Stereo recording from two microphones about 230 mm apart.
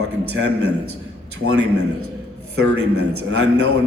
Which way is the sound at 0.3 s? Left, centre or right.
Right.